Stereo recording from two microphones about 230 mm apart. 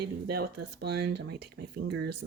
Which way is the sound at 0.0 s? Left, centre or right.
Right.